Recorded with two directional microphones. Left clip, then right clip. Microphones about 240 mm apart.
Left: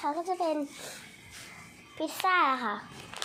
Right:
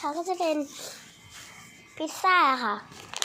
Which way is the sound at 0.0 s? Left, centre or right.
Centre.